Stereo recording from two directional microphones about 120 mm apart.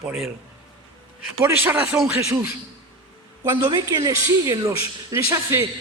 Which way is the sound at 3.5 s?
40° right (ahead or behind).